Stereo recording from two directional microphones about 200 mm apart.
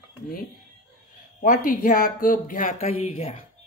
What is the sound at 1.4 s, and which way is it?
Speech, 40° left (ahead or behind).